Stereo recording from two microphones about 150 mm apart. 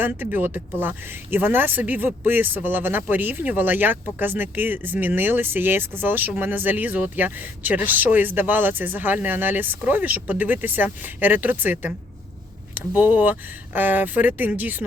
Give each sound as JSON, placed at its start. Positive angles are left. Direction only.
{"t": 0.0, "sound": "speech", "side_deg": -15}